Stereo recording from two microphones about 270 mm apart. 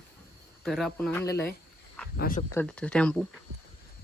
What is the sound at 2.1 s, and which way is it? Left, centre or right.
Speech, left.